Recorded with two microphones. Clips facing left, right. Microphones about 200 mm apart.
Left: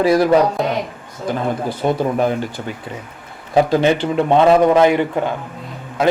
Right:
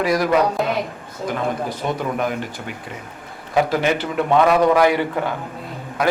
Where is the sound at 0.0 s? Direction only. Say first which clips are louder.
Left 5 dB; 30° left (ahead or behind).